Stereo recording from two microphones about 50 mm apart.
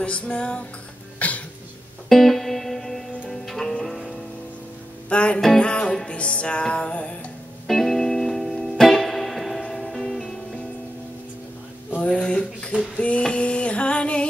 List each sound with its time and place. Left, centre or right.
0.0 s music: left
1.2 s cough: left
2.0 s music: centre
5.1 s music: left
7.6 s music: centre
12.0 s a sound: centre
12.9 s female singing: left